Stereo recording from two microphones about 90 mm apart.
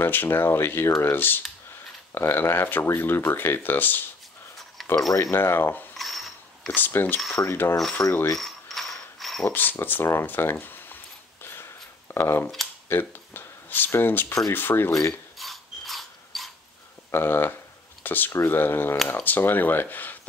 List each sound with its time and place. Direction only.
0.0 s speech: 25° left (ahead or behind)
4.8 s a sound: centre (ahead or behind)
5.1 s speech: 30° left (ahead or behind)
5.9 s a sound: centre (ahead or behind)
6.7 s speech: 25° left (ahead or behind)
8.0 s a sound: 45° left (ahead or behind)
8.4 s mechanisms: 5° left (ahead or behind)
9.5 s speech: 20° left (ahead or behind)
12.1 s speech: 25° left (ahead or behind)
15.3 s ratchet: centre (ahead or behind)
17.1 s speech: 25° left (ahead or behind)